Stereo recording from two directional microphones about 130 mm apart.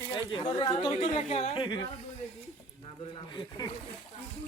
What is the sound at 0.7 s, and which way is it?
Speech, 55° left (ahead or behind).